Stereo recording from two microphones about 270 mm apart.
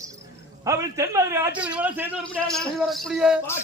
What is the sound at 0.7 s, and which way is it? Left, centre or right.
A man's voice, centre.